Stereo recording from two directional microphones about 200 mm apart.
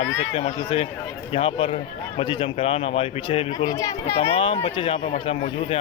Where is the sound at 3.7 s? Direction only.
15° left (ahead or behind).